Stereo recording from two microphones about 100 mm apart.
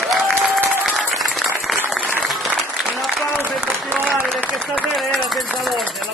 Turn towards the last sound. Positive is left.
turn(degrees=0)  # may be behind; listen again after turning